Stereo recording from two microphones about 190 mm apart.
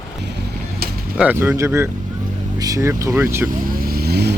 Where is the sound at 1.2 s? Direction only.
10° right (ahead or behind).